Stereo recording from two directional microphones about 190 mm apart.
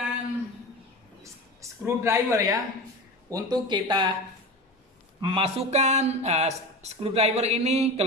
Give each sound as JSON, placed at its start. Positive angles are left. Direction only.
{"t": 1.6, "sound": "speech", "side_deg": -15}
{"t": 5.2, "sound": "speech", "side_deg": -30}